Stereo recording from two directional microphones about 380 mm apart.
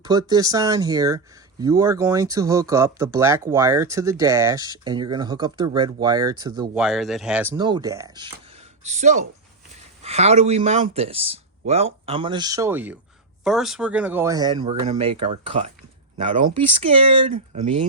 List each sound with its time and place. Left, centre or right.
0.0 s speech: centre